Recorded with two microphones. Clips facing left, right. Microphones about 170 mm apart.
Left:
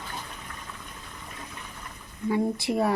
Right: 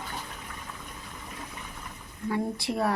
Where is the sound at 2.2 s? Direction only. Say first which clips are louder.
Left 4 dB; centre (ahead or behind).